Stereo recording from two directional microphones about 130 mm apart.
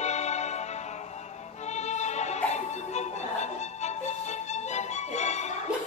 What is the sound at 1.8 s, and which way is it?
Music, 60° left (ahead or behind).